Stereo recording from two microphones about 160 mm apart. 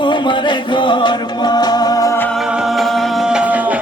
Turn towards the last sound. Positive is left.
turn(degrees=-10)  # may be behind; listen again after turning